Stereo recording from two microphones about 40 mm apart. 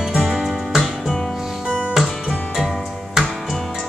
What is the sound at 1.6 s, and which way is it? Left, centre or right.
Music, right.